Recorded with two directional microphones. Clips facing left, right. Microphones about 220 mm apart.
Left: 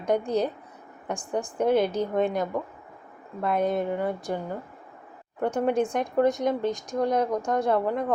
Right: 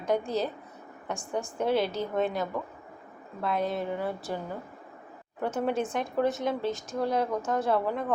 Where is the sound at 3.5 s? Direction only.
50° left (ahead or behind).